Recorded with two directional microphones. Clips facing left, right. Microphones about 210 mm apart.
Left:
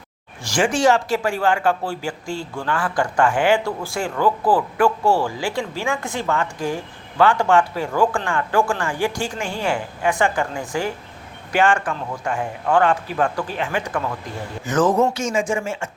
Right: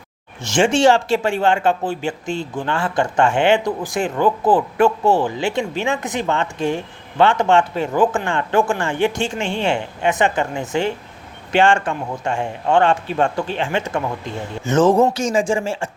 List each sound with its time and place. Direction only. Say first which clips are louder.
0.4 s speech: right 3 dB; 25° right (ahead or behind)